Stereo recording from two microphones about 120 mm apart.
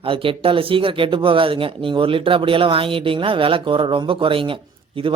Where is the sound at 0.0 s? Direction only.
50° right (ahead or behind).